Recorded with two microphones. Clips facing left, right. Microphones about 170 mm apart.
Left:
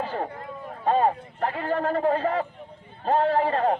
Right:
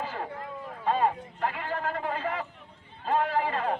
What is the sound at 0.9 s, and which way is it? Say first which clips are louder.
Speech: left 4 dB; 45° left (ahead or behind).